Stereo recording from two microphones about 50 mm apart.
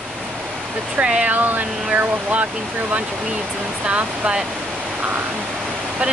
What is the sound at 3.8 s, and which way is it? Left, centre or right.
Speech, right.